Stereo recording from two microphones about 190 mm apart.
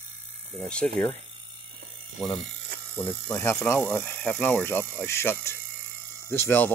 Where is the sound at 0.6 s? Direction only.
5° left (ahead or behind).